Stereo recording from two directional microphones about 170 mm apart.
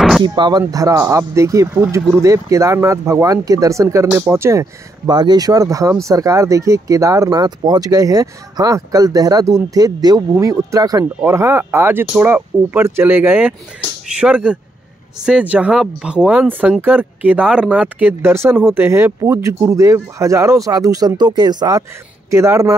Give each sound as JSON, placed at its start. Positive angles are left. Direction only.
{"t": 0.2, "sound": "speech", "side_deg": -25}